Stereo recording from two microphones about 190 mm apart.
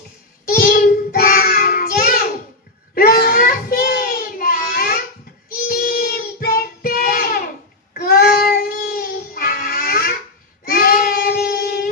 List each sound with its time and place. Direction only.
0.4 s child singing: 50° left (ahead or behind)